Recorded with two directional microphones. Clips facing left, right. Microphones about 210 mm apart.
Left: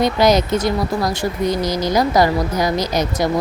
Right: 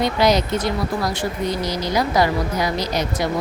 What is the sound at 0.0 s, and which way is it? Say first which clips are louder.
Speech: left 3 dB; 45° left (ahead or behind).